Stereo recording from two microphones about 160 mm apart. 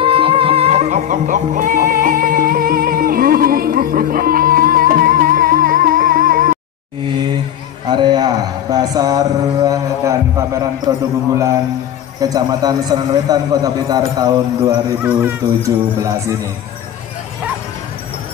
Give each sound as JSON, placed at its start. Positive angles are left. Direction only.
{"t": 0.0, "sound": "music", "side_deg": -35}
{"t": 7.8, "sound": "speech", "side_deg": -30}
{"t": 12.2, "sound": "a man's voice", "side_deg": -25}
{"t": 15.0, "sound": "speech", "side_deg": -10}